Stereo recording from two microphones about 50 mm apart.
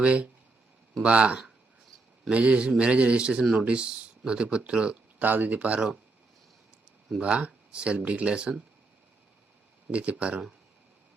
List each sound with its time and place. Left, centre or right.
0.0 s speech: right
5.2 s speech: right
7.2 s speech: right
9.9 s speech: right